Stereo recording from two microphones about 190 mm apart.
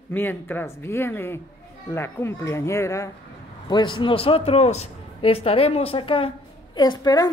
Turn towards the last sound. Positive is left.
turn(degrees=20)  # may be behind; listen again after turning